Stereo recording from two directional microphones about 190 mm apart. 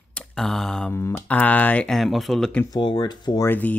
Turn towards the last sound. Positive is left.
turn(degrees=10)  # may be behind; listen again after turning